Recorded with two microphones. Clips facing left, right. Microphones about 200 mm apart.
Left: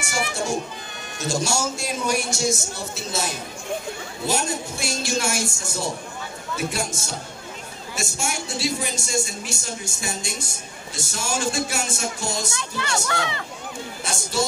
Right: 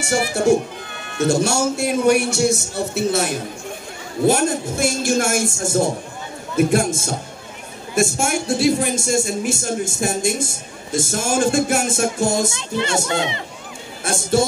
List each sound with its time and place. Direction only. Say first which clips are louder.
1.1 s a man's voice: right 7 dB; 60° right (ahead or behind)
13.0 s speech: right 5 dB; 20° right (ahead or behind)
14.0 s a man's voice: right 10 dB; 55° right (ahead or behind)